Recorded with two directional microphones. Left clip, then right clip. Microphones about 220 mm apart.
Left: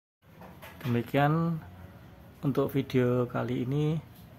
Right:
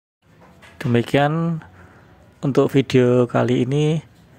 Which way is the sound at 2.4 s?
25° right (ahead or behind).